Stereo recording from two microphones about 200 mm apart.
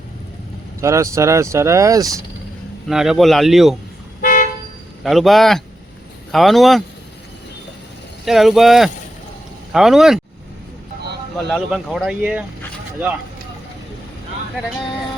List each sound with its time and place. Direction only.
0.8 s speech: 15° right (ahead or behind)
2.9 s speech: centre (ahead or behind)
4.2 s toot: 40° left (ahead or behind)
5.0 s speech: centre (ahead or behind)
8.2 s speech: centre (ahead or behind)
11.3 s speech: centre (ahead or behind)